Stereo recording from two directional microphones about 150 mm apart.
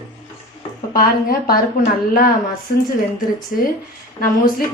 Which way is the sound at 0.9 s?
80° left.